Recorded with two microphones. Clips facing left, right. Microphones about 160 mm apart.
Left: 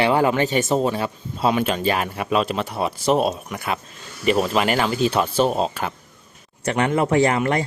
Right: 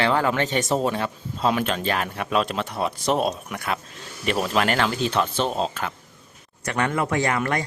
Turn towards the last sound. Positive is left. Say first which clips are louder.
# left 5 dB
turn(degrees=25)  # may be behind; listen again after turning